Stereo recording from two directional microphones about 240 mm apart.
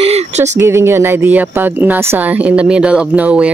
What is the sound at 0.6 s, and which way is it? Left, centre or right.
Speech, centre.